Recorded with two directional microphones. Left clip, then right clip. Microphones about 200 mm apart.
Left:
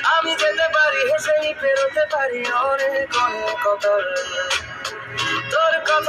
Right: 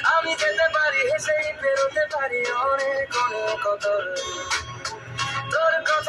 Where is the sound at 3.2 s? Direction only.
50° left (ahead or behind).